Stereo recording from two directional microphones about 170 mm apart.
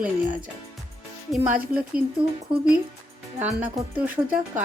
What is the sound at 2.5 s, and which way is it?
A woman's voice, 5° right (ahead or behind).